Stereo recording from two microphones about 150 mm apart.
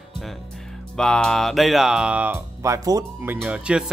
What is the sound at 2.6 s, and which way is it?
Speech, 25° right (ahead or behind).